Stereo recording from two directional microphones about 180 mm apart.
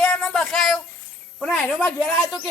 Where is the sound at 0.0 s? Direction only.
5° left (ahead or behind).